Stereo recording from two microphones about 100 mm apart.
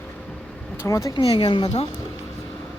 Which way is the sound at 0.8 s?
35° left (ahead or behind).